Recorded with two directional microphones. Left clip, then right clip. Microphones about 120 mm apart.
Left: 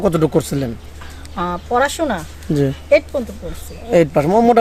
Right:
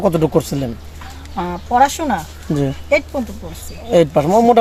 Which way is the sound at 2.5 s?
45° left (ahead or behind).